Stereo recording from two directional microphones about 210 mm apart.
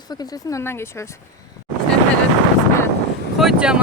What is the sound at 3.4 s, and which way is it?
Speech, 5° right (ahead or behind).